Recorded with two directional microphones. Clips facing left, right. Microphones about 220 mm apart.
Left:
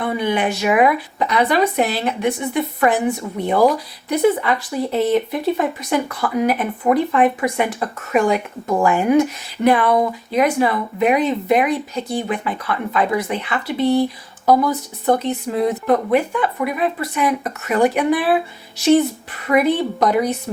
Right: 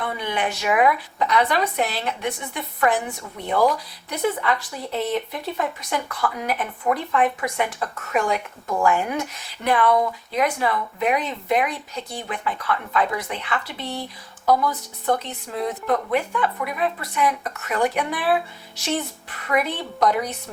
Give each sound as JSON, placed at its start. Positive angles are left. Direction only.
{"t": 0.0, "sound": "speech", "side_deg": 10}
{"t": 14.0, "sound": "speech", "side_deg": 30}
{"t": 15.4, "sound": "speech", "side_deg": 10}